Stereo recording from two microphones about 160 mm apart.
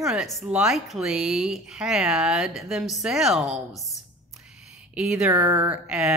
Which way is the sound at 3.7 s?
20° left (ahead or behind).